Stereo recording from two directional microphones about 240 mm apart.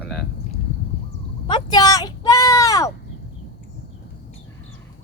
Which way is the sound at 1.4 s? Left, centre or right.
Centre.